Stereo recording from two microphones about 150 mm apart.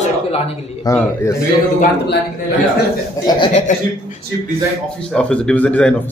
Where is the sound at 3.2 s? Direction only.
30° left (ahead or behind).